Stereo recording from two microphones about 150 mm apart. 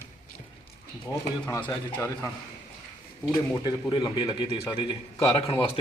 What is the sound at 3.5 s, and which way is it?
Speech, 30° left (ahead or behind).